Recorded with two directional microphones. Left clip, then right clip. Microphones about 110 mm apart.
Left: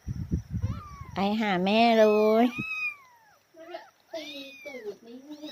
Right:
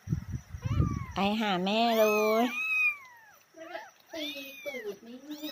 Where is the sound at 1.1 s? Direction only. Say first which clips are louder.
Left 2 dB; 35° left (ahead or behind).